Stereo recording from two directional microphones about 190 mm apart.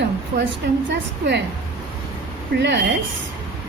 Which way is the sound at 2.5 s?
70° right (ahead or behind).